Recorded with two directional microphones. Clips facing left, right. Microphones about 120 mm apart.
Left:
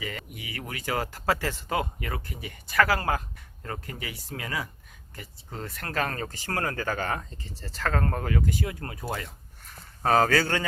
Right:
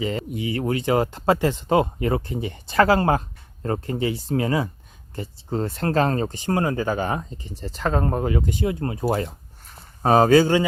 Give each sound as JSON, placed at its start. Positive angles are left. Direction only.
{"t": 0.0, "sound": "speech", "side_deg": -25}
{"t": 10.0, "sound": "speech", "side_deg": -20}